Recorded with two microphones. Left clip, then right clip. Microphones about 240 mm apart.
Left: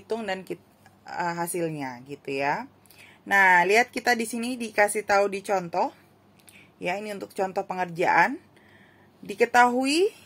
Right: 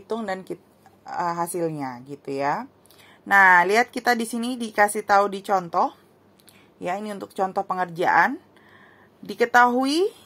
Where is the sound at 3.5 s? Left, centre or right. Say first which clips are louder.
Right 2 dB; right.